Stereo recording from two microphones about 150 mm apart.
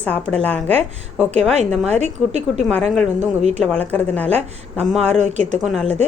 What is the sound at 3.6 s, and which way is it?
Speech, 10° left (ahead or behind).